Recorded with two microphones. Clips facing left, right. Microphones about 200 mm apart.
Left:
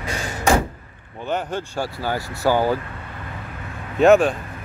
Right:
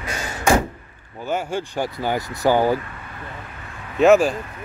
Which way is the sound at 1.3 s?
15° right (ahead or behind).